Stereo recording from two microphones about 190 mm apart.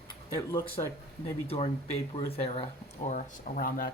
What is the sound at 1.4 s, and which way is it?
Speech, 30° left (ahead or behind).